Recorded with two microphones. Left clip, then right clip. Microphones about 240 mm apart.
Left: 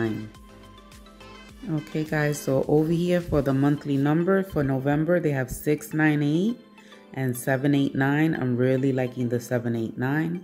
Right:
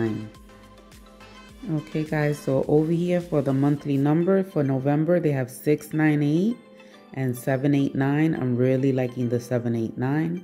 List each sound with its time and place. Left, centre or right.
1.7 s speech: centre
7.4 s speech: centre